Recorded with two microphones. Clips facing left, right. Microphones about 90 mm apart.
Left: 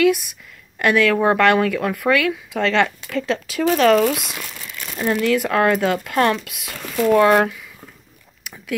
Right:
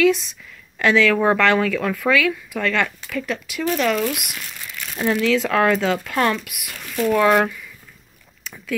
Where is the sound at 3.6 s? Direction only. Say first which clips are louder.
Left 6 dB; 50° left (ahead or behind).